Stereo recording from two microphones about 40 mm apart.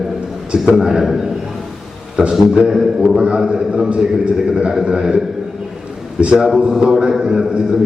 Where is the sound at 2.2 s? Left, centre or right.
Centre.